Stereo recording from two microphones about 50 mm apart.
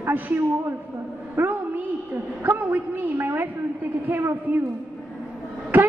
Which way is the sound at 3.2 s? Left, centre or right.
Right.